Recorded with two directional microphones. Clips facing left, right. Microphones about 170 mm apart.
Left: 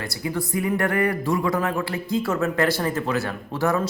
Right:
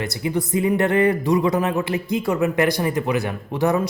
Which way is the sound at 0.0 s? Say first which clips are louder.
Right 4 dB; 20° right (ahead or behind).